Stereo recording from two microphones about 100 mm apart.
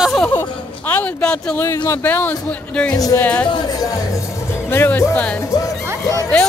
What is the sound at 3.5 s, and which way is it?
Speech, 40° left (ahead or behind).